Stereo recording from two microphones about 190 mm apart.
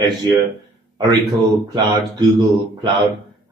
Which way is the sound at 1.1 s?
20° right (ahead or behind).